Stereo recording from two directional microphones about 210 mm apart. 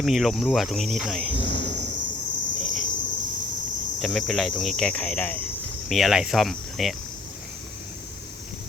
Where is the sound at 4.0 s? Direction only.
Centre (ahead or behind).